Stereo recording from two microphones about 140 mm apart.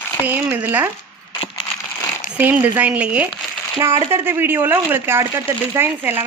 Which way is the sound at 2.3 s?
15° right (ahead or behind).